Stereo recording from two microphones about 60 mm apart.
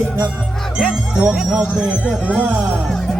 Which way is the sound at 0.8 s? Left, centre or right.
Centre.